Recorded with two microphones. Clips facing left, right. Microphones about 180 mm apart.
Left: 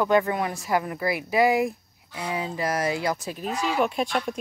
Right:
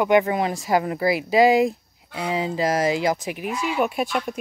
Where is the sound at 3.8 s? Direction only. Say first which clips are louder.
Right 3 dB; 5° right (ahead or behind).